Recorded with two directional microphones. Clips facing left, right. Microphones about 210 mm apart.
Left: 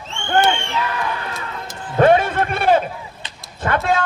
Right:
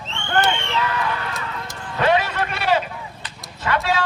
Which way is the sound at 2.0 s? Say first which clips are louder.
Left 6 dB; 50° left (ahead or behind).